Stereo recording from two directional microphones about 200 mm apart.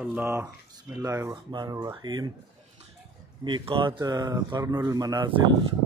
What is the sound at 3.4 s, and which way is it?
Speech, 25° right (ahead or behind).